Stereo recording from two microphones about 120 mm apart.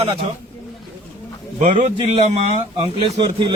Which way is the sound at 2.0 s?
55° right (ahead or behind).